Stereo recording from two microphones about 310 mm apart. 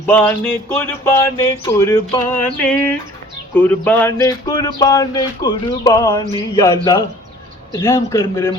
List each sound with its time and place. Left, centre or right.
0.0 s speech: centre